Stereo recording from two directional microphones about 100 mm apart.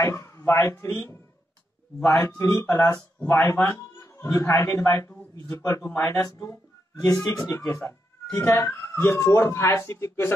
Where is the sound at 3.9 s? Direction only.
30° left (ahead or behind).